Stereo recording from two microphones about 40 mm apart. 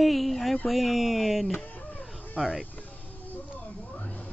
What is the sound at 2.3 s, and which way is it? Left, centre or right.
Speech, centre.